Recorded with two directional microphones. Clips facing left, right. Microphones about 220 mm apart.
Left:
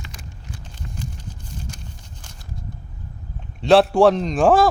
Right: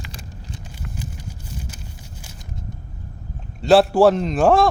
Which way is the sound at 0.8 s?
10° right (ahead or behind).